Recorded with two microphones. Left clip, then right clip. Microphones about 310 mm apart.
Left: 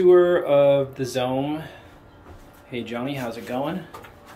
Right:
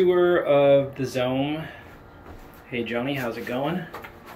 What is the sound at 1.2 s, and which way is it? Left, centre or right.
Speech, left.